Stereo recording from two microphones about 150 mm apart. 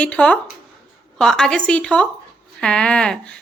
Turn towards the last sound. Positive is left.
turn(degrees=5)  # may be behind; listen again after turning